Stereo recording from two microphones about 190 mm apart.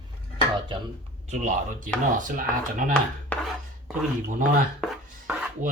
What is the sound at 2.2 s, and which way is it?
Speech, 45° right (ahead or behind).